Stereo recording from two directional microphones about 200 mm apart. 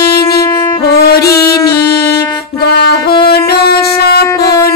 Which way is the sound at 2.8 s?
55° left (ahead or behind).